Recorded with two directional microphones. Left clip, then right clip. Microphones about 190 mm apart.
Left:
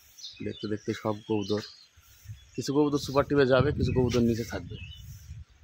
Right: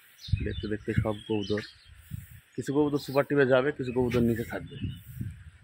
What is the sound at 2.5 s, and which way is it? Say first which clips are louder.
Speech: left 1 dB; 20° left (ahead or behind).